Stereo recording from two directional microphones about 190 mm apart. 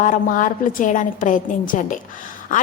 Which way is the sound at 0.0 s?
45° left (ahead or behind).